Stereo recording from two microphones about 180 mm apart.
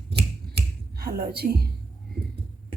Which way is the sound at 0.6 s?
60° right (ahead or behind).